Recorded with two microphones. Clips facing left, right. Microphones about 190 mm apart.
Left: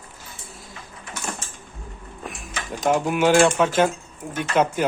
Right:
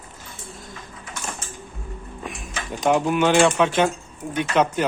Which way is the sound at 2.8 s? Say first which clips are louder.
Right 1 dB; 5° left (ahead or behind).